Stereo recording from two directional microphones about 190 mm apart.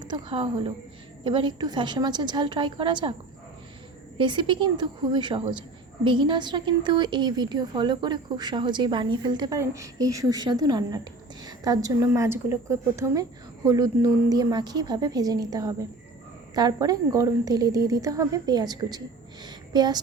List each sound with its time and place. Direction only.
0.0 s a woman's voice: 25° right (ahead or behind)
4.2 s speech: 25° right (ahead or behind)
19.5 s a sound: 20° right (ahead or behind)